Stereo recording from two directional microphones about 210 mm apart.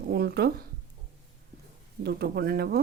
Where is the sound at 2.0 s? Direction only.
50° right (ahead or behind).